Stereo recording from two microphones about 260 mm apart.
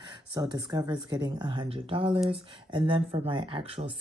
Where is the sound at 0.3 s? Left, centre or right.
Centre.